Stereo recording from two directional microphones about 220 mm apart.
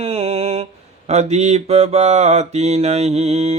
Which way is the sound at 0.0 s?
30° right (ahead or behind).